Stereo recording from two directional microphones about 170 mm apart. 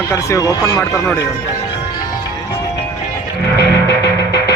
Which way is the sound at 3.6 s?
75° left (ahead or behind).